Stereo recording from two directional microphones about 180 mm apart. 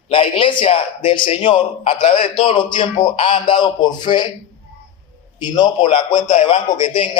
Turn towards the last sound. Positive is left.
turn(degrees=30)  # may be behind; listen again after turning